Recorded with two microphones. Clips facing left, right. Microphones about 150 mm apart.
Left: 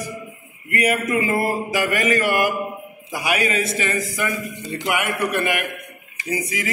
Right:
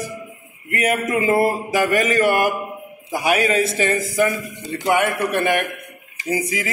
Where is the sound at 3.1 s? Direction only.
40° right (ahead or behind).